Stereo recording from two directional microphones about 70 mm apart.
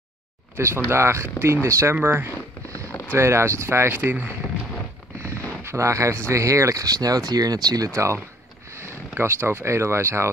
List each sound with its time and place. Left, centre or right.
0.6 s speech: right
2.7 s a sound: left
3.1 s speech: right
5.2 s speech: right
7.9 s speech: right